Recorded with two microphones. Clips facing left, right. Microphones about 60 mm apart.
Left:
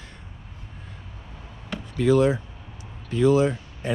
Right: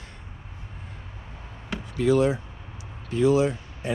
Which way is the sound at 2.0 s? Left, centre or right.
Left.